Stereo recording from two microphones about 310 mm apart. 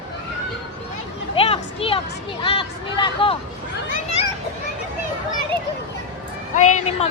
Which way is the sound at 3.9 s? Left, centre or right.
Left.